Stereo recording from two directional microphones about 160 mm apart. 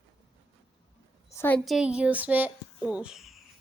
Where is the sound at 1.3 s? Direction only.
15° left (ahead or behind).